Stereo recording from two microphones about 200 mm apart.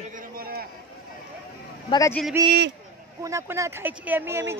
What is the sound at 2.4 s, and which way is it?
Speech, 15° right (ahead or behind).